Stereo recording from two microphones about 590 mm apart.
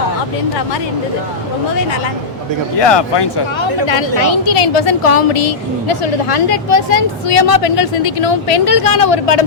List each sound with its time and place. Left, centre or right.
3.8 s a woman's voice: left